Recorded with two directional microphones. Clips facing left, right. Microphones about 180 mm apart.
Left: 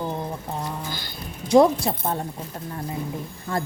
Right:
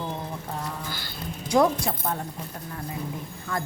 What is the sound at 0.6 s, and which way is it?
A woman's voice, 20° left (ahead or behind).